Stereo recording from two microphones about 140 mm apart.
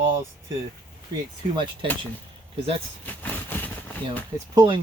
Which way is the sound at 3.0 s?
10° left (ahead or behind).